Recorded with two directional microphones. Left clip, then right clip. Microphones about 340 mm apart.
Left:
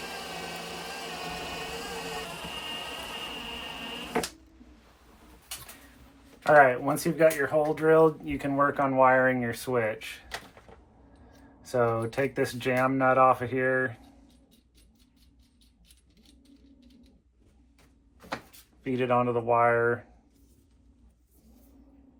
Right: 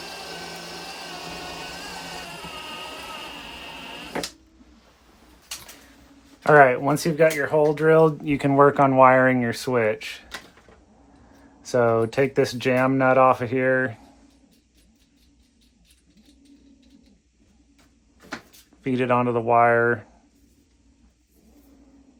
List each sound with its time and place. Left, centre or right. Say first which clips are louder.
6.4 s speech: right 5 dB; right
11.6 s speech: right 7 dB; right
18.8 s speech: right 4 dB; right